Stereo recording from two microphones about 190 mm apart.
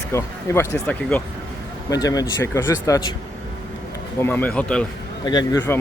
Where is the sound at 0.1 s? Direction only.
15° left (ahead or behind).